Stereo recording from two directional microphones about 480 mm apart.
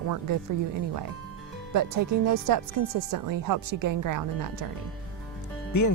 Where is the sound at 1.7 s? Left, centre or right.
Right.